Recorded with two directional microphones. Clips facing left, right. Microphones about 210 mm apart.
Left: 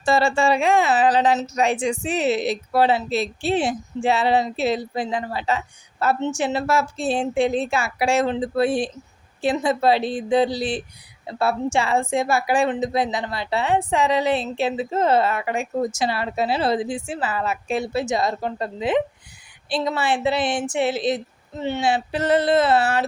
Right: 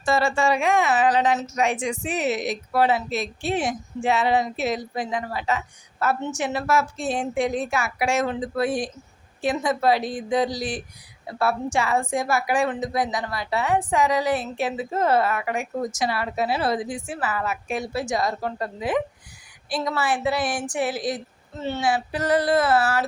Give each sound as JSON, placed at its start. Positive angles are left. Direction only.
{"t": 0.0, "sound": "a woman's voice", "side_deg": 30}